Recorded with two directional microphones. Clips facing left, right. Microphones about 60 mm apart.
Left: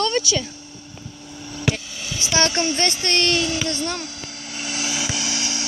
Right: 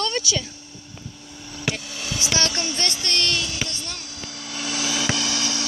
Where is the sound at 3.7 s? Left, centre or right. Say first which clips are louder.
Left 9 dB; left.